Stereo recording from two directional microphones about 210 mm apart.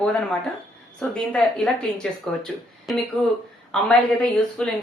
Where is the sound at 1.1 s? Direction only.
5° left (ahead or behind).